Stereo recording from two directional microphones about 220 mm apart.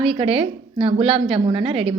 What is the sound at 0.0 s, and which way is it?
A woman's voice, 25° right (ahead or behind).